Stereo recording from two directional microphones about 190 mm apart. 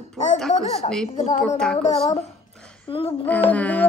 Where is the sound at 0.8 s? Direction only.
35° left (ahead or behind).